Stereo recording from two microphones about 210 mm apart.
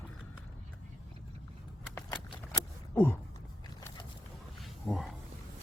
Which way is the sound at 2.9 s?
10° left (ahead or behind).